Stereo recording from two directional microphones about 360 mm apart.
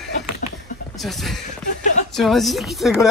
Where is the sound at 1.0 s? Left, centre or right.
Centre.